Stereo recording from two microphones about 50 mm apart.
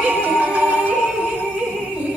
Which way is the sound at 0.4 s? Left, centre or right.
Right.